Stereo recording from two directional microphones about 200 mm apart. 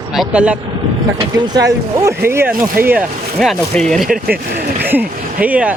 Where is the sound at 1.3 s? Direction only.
20° right (ahead or behind).